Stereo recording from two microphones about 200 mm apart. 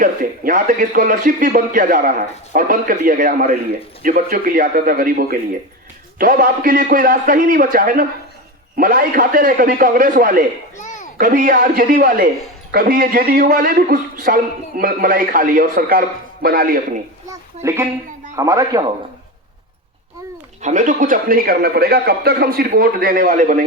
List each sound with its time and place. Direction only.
0.0 s speech: 40° right (ahead or behind)
10.8 s a sound: 40° left (ahead or behind)
11.2 s speech: 40° right (ahead or behind)
17.2 s a woman's voice: 15° right (ahead or behind)
20.6 s speech: 35° right (ahead or behind)